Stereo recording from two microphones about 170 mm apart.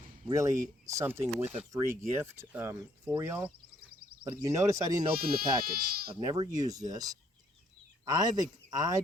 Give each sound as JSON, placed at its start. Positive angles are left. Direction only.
{"t": 0.3, "sound": "speech", "side_deg": -20}
{"t": 3.8, "sound": "a sound", "side_deg": -65}
{"t": 4.2, "sound": "speech", "side_deg": -20}
{"t": 5.1, "sound": "speech", "side_deg": -60}
{"t": 6.1, "sound": "speech", "side_deg": -25}